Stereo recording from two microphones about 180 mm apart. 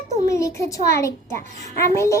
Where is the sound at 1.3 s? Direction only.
45° right (ahead or behind).